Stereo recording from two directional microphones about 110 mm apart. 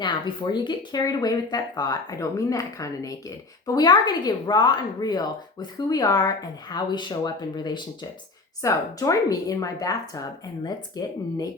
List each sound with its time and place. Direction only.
0.0 s speech: 45° left (ahead or behind)